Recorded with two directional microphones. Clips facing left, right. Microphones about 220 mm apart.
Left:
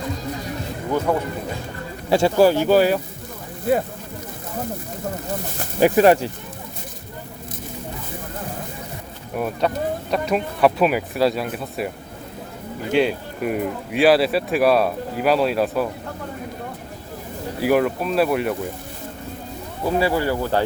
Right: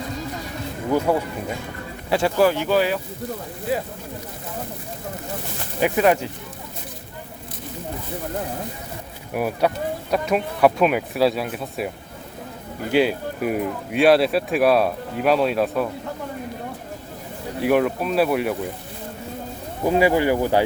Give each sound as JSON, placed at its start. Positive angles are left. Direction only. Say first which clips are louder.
{"t": 2.0, "sound": "speech", "louder": "left 3 dB", "side_deg": 30}
{"t": 5.8, "sound": "speech", "louder": "left 4 dB", "side_deg": 35}
{"t": 9.3, "sound": "speech", "louder": "right 1 dB", "side_deg": -10}
{"t": 12.9, "sound": "speech", "louder": "even", "side_deg": -5}
{"t": 17.6, "sound": "speech", "louder": "even", "side_deg": 0}
{"t": 19.8, "sound": "speech", "louder": "right 3 dB", "side_deg": -15}